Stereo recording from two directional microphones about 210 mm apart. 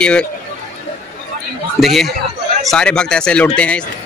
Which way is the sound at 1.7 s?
Centre (ahead or behind).